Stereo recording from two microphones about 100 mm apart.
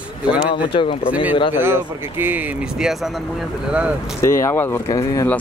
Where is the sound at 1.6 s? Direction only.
20° right (ahead or behind).